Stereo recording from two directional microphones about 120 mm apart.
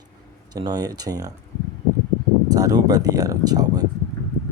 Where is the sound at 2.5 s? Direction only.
30° right (ahead or behind).